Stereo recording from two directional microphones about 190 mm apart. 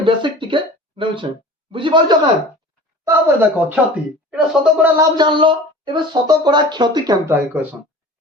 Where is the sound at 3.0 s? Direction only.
10° right (ahead or behind).